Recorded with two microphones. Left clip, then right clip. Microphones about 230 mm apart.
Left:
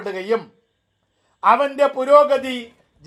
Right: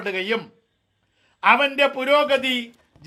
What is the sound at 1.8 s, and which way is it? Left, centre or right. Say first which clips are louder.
Speech: left 2 dB; right.